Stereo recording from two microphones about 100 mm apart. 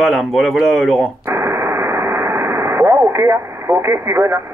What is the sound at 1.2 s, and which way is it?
Radio, 25° right (ahead or behind).